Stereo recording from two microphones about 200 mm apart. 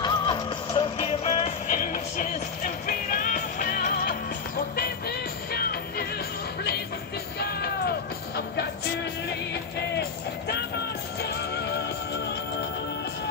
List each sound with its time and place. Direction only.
0.0 s music: 25° left (ahead or behind); by 6.0 s 50° left (ahead or behind)
7.3 s music: 50° left (ahead or behind)
9.5 s music: 55° left (ahead or behind)
11.1 s music: 55° left (ahead or behind)